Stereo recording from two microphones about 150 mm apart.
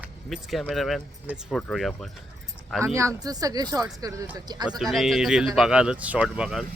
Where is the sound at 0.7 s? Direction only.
Centre (ahead or behind).